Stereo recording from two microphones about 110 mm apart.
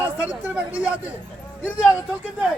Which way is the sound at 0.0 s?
15° right (ahead or behind).